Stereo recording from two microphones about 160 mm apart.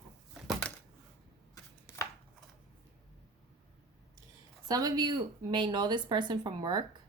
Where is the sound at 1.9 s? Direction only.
20° left (ahead or behind).